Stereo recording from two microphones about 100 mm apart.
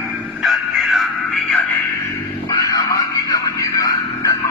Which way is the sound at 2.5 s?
35° left (ahead or behind).